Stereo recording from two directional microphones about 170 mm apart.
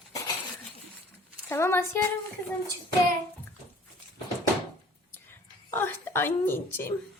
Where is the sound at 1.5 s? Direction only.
15° left (ahead or behind).